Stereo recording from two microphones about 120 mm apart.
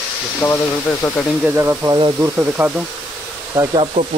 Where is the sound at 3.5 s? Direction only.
30° right (ahead or behind).